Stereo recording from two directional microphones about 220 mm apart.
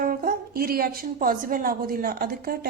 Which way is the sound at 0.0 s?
40° right (ahead or behind).